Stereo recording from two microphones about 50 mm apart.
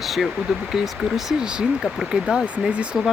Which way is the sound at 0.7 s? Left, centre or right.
Centre.